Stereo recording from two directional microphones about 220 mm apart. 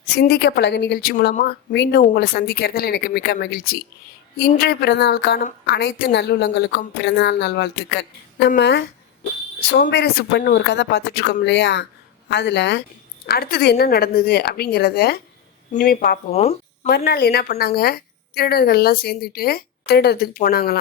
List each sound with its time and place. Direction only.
0.2 s a woman's voice: 45° left (ahead or behind)
16.3 s speech: 30° left (ahead or behind)
16.9 s a woman's voice: 45° left (ahead or behind)